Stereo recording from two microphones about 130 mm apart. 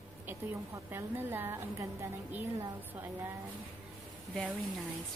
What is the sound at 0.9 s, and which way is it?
Speech, 15° right (ahead or behind).